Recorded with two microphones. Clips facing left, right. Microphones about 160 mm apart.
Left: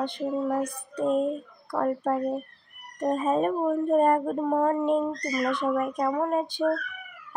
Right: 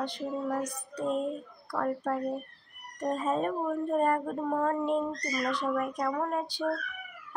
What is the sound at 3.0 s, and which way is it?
Speech, 15° left (ahead or behind).